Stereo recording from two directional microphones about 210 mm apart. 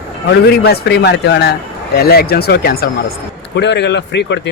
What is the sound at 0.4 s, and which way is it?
A man's voice, 50° left (ahead or behind).